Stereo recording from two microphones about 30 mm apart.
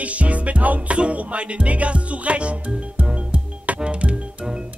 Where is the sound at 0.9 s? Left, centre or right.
Right.